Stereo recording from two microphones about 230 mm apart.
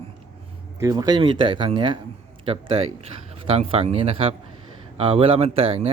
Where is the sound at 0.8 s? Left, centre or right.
Centre.